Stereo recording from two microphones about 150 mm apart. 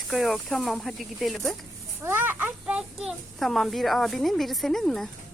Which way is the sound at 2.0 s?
15° right (ahead or behind).